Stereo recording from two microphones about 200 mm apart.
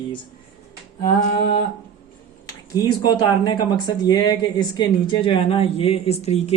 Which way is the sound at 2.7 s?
20° left (ahead or behind).